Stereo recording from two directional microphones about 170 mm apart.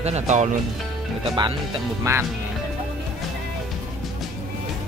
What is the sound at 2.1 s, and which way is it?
Speech, 20° right (ahead or behind).